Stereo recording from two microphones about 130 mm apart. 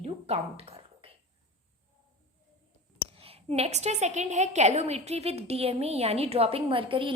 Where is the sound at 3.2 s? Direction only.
50° right (ahead or behind).